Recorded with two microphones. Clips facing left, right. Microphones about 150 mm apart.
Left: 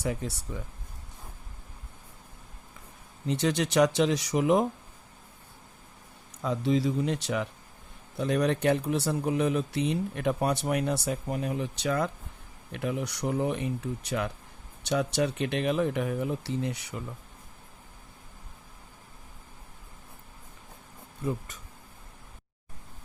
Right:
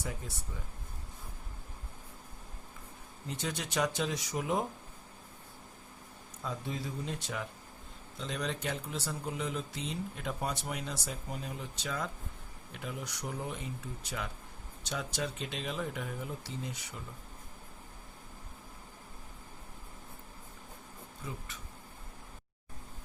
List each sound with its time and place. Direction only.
0.0 s speech: 75° left (ahead or behind)
3.2 s speech: 75° left (ahead or behind)
6.4 s speech: 80° left
8.1 s speech: 60° left (ahead or behind)
21.2 s speech: 45° left (ahead or behind)